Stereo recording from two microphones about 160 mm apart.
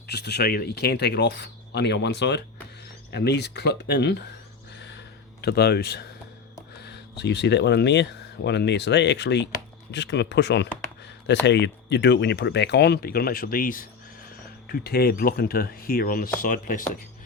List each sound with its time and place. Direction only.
0.1 s speech: 90° left
4.8 s a sound: 90° left
6.8 s speech: 90° left; by 13.8 s 60° left (ahead or behind)
14.7 s speech: 75° left (ahead or behind); by 16.8 s 60° left (ahead or behind)